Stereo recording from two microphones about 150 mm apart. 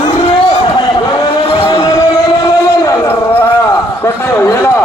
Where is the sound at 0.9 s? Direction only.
30° left (ahead or behind).